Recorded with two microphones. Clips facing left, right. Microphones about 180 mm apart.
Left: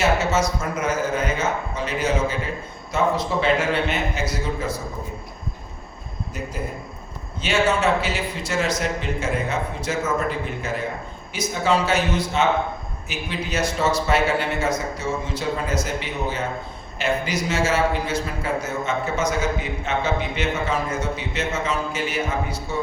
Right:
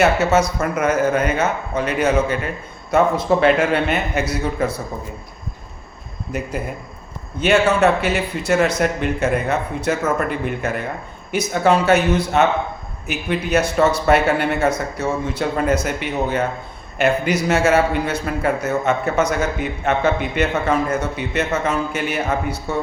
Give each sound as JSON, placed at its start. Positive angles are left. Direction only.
{"t": 0.0, "sound": "a man's voice", "side_deg": -60}
{"t": 6.3, "sound": "a man's voice", "side_deg": -65}